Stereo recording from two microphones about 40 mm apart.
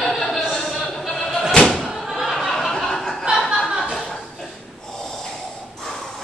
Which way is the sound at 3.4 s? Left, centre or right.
Centre.